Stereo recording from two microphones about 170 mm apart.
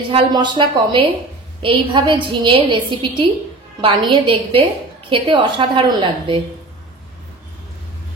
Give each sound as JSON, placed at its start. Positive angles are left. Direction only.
{"t": 0.1, "sound": "a woman's voice", "side_deg": -25}